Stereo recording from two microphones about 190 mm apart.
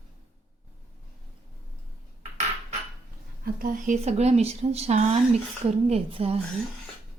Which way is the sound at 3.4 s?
45° right (ahead or behind).